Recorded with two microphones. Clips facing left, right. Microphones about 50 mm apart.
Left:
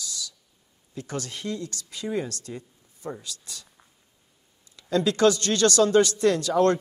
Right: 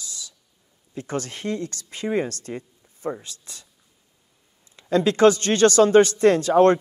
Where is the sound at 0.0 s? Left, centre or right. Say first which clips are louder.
Left 3 dB; right.